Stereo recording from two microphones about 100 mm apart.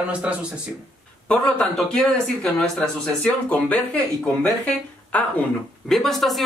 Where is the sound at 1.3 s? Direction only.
15° left (ahead or behind).